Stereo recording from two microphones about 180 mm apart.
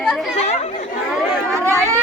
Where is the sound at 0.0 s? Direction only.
Centre (ahead or behind).